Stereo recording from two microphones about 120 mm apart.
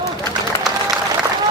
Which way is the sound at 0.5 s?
25° left (ahead or behind).